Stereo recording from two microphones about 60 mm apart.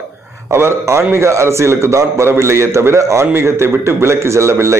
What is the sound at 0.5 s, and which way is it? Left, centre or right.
A man's voice, right.